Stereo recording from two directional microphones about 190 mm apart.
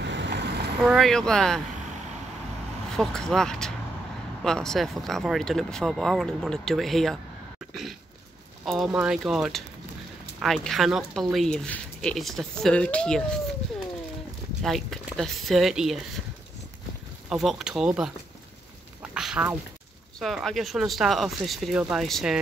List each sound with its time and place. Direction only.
0.0 s vehicle: 70° right (ahead or behind)
0.8 s speech: centre (ahead or behind)
3.0 s speech: centre (ahead or behind)
8.6 s speech: centre (ahead or behind)
14.6 s speech: centre (ahead or behind)
17.3 s speech: centre (ahead or behind)
19.1 s a sound: 5° right (ahead or behind)
20.2 s speech: centre (ahead or behind)